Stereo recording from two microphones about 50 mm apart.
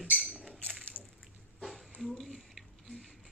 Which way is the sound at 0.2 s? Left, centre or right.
Centre.